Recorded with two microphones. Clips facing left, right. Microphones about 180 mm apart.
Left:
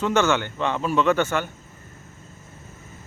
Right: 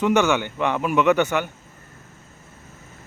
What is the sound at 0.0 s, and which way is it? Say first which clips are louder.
A man's voice: right 2 dB; 15° right (ahead or behind).